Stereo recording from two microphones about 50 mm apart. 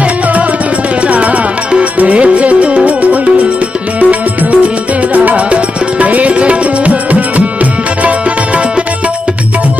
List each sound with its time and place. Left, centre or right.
1.0 s music: right